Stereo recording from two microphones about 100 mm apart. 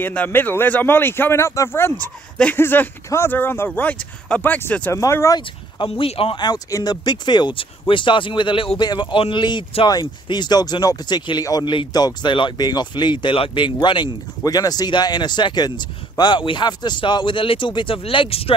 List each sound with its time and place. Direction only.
0.0 s speech: 15° left (ahead or behind)
4.9 s speech: 30° left (ahead or behind)
5.8 s speech: 70° left (ahead or behind)
6.3 s speech: 45° left (ahead or behind); by 8.7 s 60° left (ahead or behind)
8.7 s speech: 45° left (ahead or behind)
14.4 s speech: 40° left (ahead or behind); by 18.5 s 65° left (ahead or behind)